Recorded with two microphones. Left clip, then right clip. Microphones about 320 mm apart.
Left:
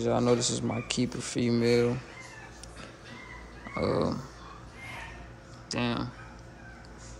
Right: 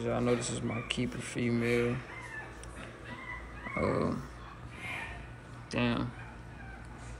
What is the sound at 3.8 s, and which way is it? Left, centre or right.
Speech, centre.